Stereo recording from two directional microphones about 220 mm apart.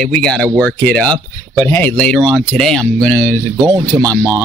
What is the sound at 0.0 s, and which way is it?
Speech, 5° left (ahead or behind).